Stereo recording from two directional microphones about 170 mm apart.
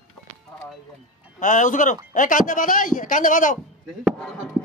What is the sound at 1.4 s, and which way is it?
Speech, 45° left (ahead or behind).